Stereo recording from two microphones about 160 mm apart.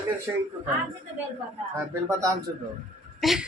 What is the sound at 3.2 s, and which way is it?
Speech, centre (ahead or behind).